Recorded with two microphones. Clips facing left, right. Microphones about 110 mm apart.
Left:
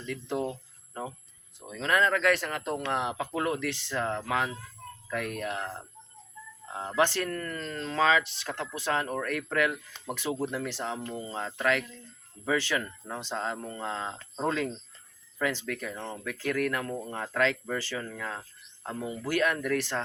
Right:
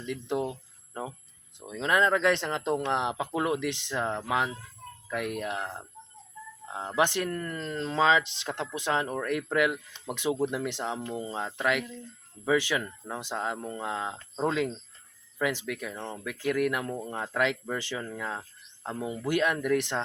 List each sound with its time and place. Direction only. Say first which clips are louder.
0.0 s speech: right 1 dB; 15° right (ahead or behind)
1.5 s speech: right 1 dB; 20° right (ahead or behind)